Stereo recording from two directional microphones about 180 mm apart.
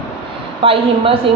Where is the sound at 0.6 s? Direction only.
30° right (ahead or behind).